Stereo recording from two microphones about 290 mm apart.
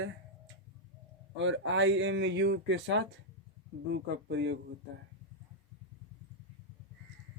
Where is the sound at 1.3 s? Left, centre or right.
Right.